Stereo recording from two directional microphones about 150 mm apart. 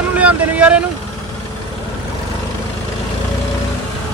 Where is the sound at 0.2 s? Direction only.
10° right (ahead or behind).